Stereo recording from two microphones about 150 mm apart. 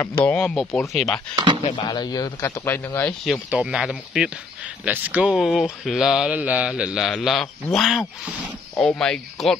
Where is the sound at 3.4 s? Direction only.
5° right (ahead or behind).